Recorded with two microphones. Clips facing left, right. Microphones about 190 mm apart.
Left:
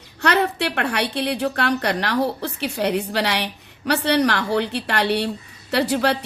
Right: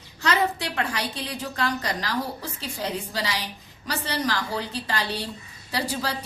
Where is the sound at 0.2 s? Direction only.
65° left (ahead or behind).